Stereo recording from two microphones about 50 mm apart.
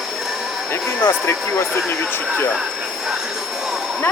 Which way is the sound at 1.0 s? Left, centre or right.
Left.